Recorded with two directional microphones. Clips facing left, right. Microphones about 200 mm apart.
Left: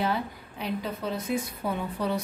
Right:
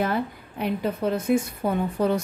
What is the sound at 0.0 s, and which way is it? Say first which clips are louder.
A woman's voice: right 4 dB; 50° right (ahead or behind).